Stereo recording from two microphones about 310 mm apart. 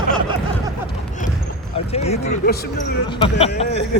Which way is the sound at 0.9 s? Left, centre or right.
Left.